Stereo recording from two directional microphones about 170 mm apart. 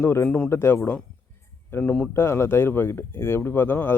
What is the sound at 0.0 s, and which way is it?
Speech, 15° left (ahead or behind).